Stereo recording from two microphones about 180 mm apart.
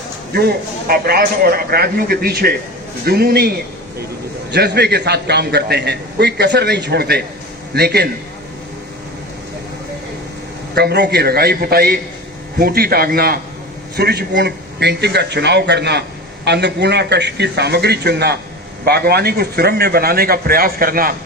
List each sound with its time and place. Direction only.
0.3 s a man's voice: 60° right (ahead or behind)
4.5 s a man's voice: 70° right (ahead or behind)
10.8 s a man's voice: 65° right (ahead or behind)